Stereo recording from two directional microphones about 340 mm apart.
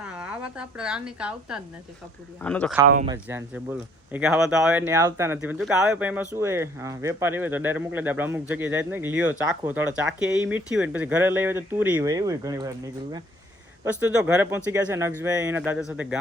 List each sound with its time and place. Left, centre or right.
0.0 s a woman's voice: centre
2.9 s speech: centre
3.2 s speech: centre